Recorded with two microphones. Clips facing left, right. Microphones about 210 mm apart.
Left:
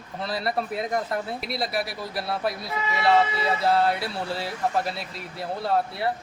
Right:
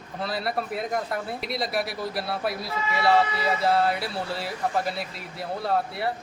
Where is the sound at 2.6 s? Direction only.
20° left (ahead or behind).